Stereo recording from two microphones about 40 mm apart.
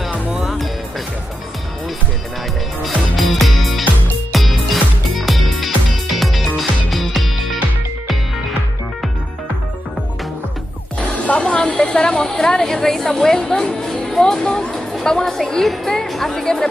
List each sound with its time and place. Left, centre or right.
0.5 s music: centre
2.8 s music: centre
11.0 s music: left
11.5 s a woman's voice: left